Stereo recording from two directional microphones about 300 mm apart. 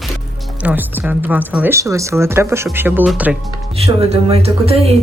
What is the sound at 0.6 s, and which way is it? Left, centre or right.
Speech, centre.